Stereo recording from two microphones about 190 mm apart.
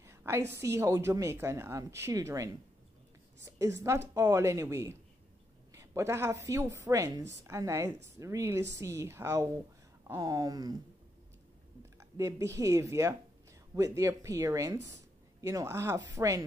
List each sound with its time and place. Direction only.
0.0 s a woman's voice: 15° right (ahead or behind)
12.0 s a woman's voice: 15° right (ahead or behind)